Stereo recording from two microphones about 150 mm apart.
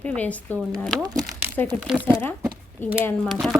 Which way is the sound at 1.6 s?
15° left (ahead or behind).